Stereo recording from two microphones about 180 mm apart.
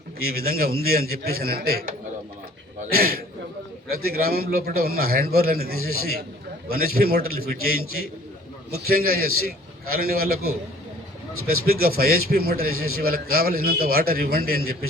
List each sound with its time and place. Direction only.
0.2 s a man's voice: 55° right (ahead or behind)